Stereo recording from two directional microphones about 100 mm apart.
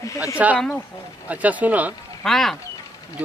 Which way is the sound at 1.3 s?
15° right (ahead or behind).